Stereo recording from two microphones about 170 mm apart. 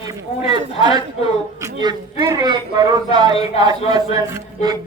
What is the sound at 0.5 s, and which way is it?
A man's voice, 25° right (ahead or behind).